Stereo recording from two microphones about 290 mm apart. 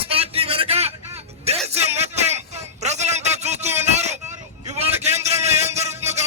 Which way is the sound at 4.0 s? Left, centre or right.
Right.